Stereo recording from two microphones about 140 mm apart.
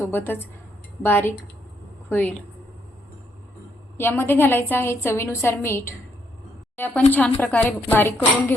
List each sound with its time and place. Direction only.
0.0 s a woman's voice: 15° left (ahead or behind)
3.9 s a woman's voice: 15° left (ahead or behind)